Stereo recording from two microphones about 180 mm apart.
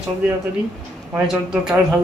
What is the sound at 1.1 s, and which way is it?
Speech, 5° right (ahead or behind).